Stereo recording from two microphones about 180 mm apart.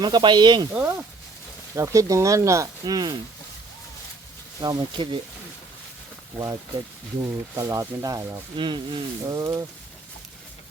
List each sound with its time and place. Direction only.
0.0 s speech: 25° right (ahead or behind)
0.7 s speech: 10° right (ahead or behind)
4.6 s speech: 25° right (ahead or behind)
6.3 s speech: 20° right (ahead or behind)